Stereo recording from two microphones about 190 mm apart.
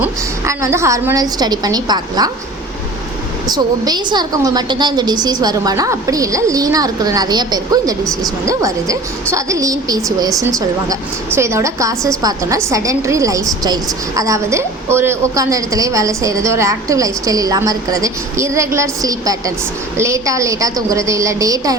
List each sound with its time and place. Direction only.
0.0 s a woman's voice: 15° right (ahead or behind)
3.4 s a woman's voice: 20° right (ahead or behind)